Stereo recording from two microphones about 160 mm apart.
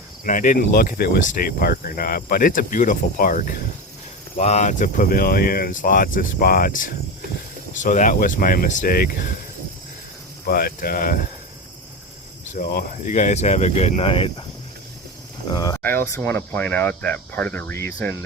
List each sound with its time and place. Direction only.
0.3 s speech: 55° left (ahead or behind)
4.4 s speech: 45° left (ahead or behind); by 9.3 s 65° left (ahead or behind)
10.4 s speech: 70° left (ahead or behind)
12.5 s speech: 55° left (ahead or behind); by 14.3 s 35° left (ahead or behind)
15.4 s speech: 25° left (ahead or behind)
15.8 s speech: 10° left (ahead or behind)